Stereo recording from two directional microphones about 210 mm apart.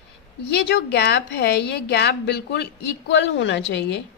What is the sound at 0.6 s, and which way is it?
A woman's voice, 55° left (ahead or behind).